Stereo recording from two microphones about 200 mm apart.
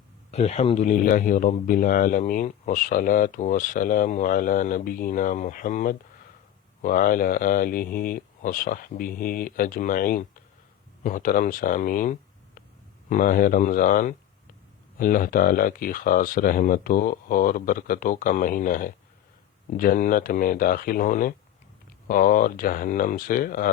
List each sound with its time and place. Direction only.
0.3 s speech: 35° left (ahead or behind)